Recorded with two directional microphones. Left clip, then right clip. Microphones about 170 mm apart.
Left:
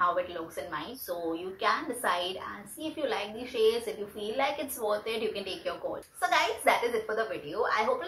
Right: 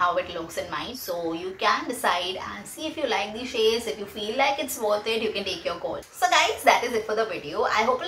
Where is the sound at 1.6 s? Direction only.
10° right (ahead or behind).